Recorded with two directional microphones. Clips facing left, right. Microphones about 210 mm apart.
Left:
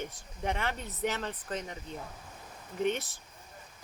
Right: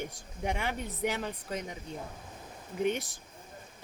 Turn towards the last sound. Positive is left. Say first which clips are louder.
# even
turn(degrees=-15)  # may be behind; listen again after turning